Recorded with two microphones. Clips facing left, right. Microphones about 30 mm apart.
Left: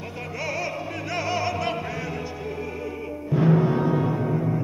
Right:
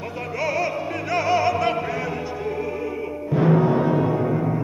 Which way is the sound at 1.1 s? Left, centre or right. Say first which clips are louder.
Right 6 dB; centre.